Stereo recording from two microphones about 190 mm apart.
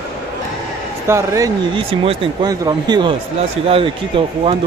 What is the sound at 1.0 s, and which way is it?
Speech, 15° right (ahead or behind).